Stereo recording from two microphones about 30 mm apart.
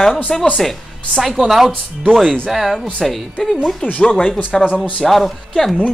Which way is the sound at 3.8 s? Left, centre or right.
Left.